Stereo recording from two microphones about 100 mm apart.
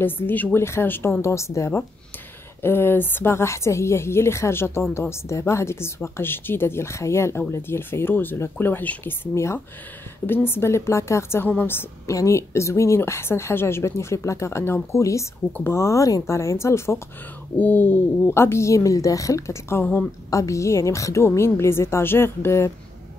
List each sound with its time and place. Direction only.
0.0 s a woman's voice: 20° left (ahead or behind)
20.2 s a woman's voice: 30° left (ahead or behind)